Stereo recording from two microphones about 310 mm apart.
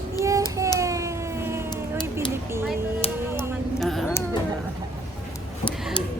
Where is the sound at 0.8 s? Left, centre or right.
Centre.